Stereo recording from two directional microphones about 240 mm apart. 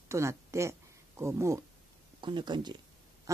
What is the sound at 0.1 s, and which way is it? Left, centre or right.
Speech, centre.